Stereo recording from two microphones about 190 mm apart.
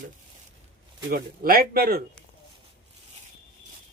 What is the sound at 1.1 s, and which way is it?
Speech, 50° right (ahead or behind).